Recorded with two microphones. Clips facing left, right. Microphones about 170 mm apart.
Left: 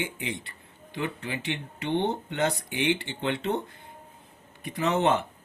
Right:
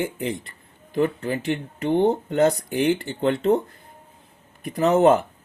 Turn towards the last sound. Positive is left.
turn(degrees=-35)  # may be behind; listen again after turning